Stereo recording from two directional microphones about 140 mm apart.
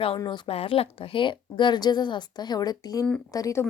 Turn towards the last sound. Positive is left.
turn(degrees=25)  # may be behind; listen again after turning